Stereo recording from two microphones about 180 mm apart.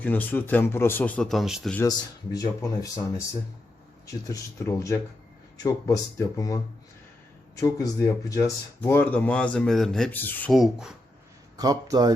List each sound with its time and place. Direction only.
0.0 s speech: 10° left (ahead or behind)
1.9 s speech: 20° left (ahead or behind)
4.3 s speech: 15° left (ahead or behind)
10.5 s speech: centre (ahead or behind)
11.5 s speech: 20° right (ahead or behind)